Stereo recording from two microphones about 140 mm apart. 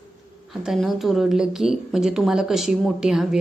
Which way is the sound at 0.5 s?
Centre (ahead or behind).